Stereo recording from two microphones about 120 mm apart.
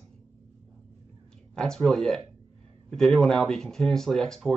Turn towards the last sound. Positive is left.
turn(degrees=5)  # may be behind; listen again after turning